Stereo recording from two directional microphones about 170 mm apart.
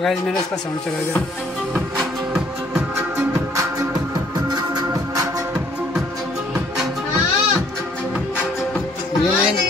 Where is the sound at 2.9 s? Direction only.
15° right (ahead or behind).